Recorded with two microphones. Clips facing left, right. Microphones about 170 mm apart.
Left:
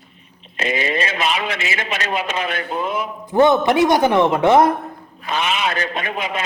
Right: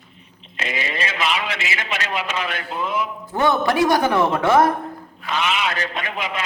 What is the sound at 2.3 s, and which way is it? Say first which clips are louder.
Speech: left 3 dB; 45° left (ahead or behind).